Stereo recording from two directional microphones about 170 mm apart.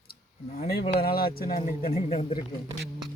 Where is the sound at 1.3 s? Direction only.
60° left (ahead or behind).